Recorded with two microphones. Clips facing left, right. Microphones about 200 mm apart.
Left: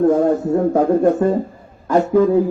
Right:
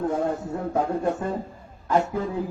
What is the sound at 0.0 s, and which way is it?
A man's voice, 50° left (ahead or behind).